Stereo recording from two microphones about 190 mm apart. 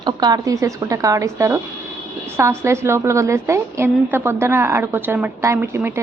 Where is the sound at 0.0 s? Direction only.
20° right (ahead or behind).